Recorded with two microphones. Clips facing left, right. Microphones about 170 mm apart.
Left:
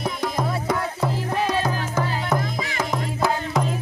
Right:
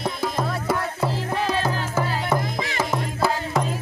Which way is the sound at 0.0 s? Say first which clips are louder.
Even; 5° right (ahead or behind).